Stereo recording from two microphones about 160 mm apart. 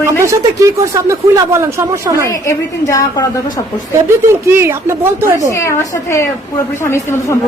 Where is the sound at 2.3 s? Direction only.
20° left (ahead or behind).